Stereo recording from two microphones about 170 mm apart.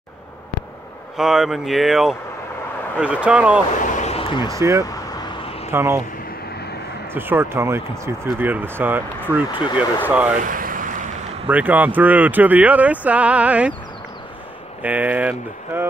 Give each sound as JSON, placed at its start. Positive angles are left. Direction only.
{"t": 1.1, "sound": "speech", "side_deg": -5}
{"t": 3.9, "sound": "a sound", "side_deg": 40}
{"t": 4.5, "sound": "speech", "side_deg": -15}
{"t": 7.2, "sound": "speech", "side_deg": -15}
{"t": 10.4, "sound": "boat", "side_deg": -55}
{"t": 11.4, "sound": "speech", "side_deg": -10}
{"t": 14.8, "sound": "speech", "side_deg": -10}